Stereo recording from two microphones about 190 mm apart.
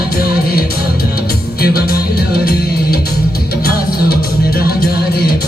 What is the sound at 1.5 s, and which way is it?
Music, 55° left (ahead or behind).